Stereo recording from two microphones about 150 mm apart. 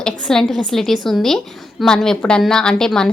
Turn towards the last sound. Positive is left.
turn(degrees=5)  # may be behind; listen again after turning